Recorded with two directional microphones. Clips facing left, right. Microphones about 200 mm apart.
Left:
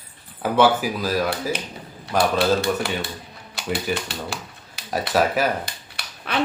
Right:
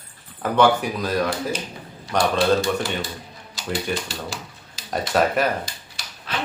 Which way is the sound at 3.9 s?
60° left (ahead or behind).